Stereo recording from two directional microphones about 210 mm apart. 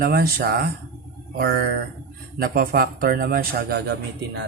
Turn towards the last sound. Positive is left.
turn(degrees=-50)  # may be behind; listen again after turning